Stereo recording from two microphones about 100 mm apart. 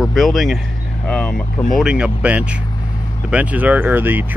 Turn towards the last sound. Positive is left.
turn(degrees=-20)  # may be behind; listen again after turning